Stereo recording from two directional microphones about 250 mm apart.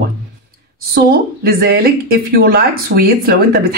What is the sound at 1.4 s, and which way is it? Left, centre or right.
A man's voice, right.